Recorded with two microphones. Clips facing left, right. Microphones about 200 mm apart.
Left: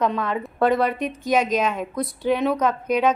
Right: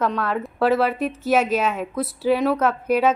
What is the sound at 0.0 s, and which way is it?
A woman's voice, 5° right (ahead or behind).